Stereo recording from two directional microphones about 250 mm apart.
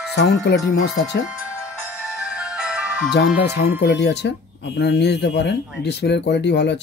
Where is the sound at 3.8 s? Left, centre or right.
Left.